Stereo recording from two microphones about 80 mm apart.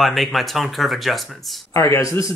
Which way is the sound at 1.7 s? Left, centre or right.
Left.